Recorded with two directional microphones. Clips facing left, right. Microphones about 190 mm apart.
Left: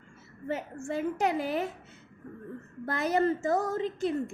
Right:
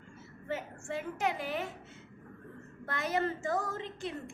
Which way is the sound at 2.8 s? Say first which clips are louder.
Left 6 dB; 35° left (ahead or behind).